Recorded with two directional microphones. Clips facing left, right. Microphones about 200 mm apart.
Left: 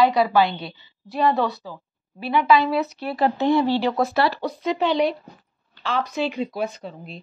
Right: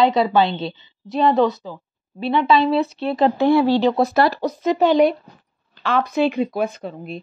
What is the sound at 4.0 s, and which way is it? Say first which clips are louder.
Speech: right 4 dB; 40° right (ahead or behind).